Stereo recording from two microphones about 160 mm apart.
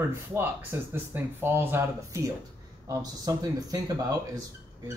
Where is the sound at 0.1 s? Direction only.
15° right (ahead or behind).